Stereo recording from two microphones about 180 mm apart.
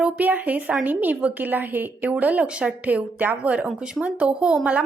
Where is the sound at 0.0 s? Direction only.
10° right (ahead or behind).